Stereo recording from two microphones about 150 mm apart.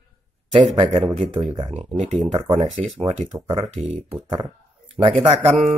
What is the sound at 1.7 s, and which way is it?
Speech, 45° right (ahead or behind).